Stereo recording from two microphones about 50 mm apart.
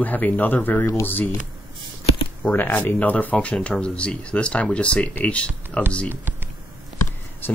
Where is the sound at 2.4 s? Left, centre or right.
Left.